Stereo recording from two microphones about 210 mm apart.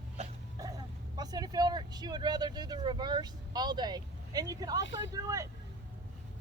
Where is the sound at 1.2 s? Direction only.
20° right (ahead or behind).